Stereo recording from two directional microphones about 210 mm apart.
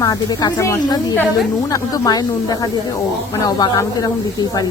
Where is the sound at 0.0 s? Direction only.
20° left (ahead or behind).